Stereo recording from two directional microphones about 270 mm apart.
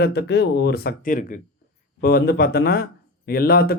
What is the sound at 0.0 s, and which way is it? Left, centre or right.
Speech, left.